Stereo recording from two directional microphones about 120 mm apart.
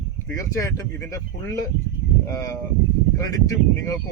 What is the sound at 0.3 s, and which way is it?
Speech, 25° left (ahead or behind).